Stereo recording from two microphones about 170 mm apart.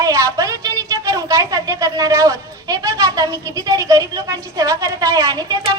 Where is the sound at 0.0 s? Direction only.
20° right (ahead or behind).